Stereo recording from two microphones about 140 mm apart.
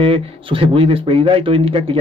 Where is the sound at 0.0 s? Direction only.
40° right (ahead or behind).